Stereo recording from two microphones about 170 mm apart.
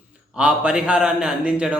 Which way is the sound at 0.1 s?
5° right (ahead or behind).